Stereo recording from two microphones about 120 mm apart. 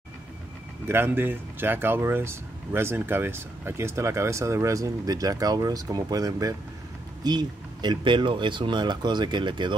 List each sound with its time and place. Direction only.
0.8 s speech: 20° right (ahead or behind); by 9.8 s 40° right (ahead or behind)